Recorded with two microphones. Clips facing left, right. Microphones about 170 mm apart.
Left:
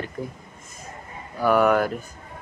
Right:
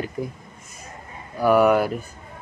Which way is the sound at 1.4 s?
10° right (ahead or behind).